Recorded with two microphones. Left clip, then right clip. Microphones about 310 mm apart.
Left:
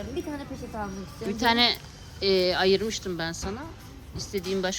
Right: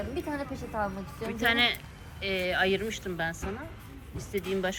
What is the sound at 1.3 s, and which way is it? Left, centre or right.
A woman's voice, centre.